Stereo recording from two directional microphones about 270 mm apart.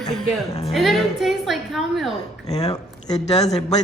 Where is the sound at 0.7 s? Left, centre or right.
Centre.